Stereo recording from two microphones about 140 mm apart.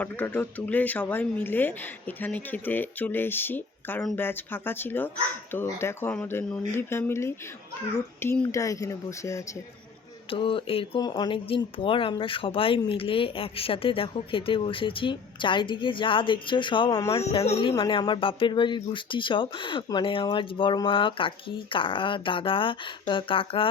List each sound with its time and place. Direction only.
0.0 s speech: 10° left (ahead or behind)
10.2 s speech: 40° left (ahead or behind)